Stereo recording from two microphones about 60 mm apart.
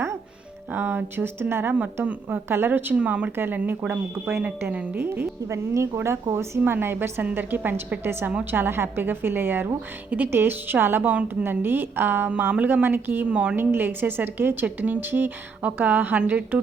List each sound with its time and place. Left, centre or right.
0.7 s a woman's voice: right
2.9 s speech: centre
3.3 s a woman's voice: right
5.5 s a woman's voice: right
11.1 s speech: right
11.4 s a woman's voice: right
13.2 s speech: centre
13.6 s a woman's voice: right